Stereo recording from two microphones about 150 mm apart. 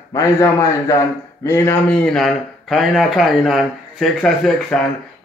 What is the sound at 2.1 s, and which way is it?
A man's voice, centre (ahead or behind).